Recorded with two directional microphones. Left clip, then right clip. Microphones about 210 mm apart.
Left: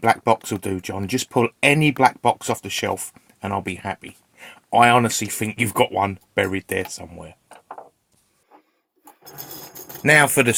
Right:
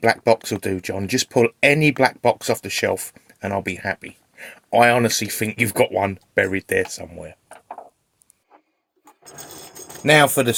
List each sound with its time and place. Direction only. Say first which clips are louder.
0.0 s speech: right 1 dB; 5° left (ahead or behind)
10.0 s speech: right 1 dB; 20° left (ahead or behind)